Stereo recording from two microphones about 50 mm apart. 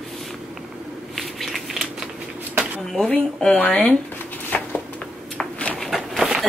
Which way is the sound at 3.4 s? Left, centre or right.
Centre.